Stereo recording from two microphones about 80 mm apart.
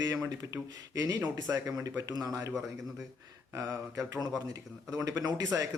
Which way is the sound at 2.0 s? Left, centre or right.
Right.